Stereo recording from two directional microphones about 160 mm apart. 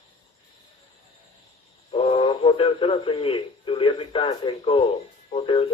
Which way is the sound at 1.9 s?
35° left (ahead or behind).